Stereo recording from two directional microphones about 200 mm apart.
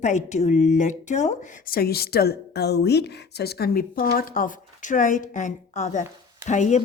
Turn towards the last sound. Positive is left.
turn(degrees=35)  # may be behind; listen again after turning